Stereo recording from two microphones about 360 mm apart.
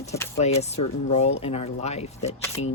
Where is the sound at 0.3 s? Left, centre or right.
Centre.